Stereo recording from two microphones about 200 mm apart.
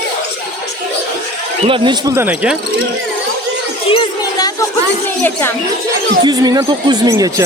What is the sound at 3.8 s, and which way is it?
Children playing, 25° left (ahead or behind).